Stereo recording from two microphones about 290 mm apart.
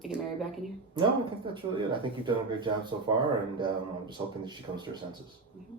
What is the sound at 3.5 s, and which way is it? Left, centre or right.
Speech, centre.